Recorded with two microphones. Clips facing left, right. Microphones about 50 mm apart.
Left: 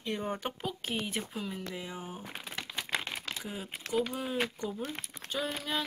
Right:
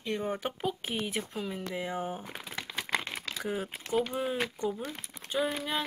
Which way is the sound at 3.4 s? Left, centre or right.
Right.